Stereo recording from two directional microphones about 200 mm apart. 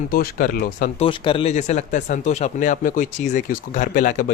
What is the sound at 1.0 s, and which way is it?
Speech, 25° left (ahead or behind).